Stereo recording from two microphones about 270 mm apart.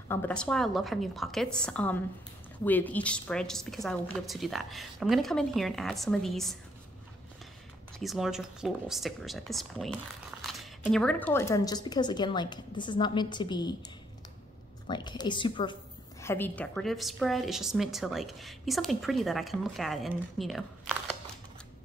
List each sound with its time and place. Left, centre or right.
0.1 s a woman's voice: centre
8.0 s a woman's voice: centre
14.9 s a woman's voice: centre